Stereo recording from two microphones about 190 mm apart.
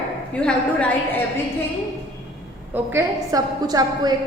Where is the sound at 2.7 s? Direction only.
10° right (ahead or behind).